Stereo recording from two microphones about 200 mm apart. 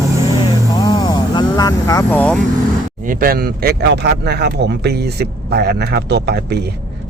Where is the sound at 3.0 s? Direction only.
45° right (ahead or behind).